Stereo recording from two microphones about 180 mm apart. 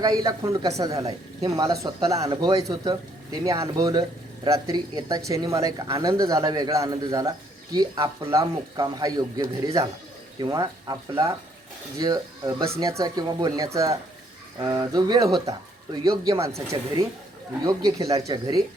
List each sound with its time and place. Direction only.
0.0 s speech: 20° right (ahead or behind)